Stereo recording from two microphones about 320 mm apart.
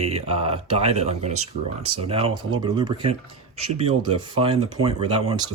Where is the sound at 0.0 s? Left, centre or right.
Centre.